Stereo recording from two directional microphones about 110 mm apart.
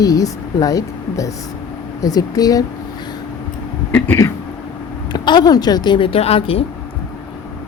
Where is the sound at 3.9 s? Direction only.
20° left (ahead or behind).